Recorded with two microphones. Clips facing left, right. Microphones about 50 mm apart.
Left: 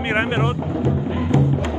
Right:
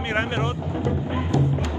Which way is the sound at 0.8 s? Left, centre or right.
Left.